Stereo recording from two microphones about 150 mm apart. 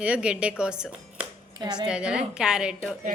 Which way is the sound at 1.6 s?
30° right (ahead or behind).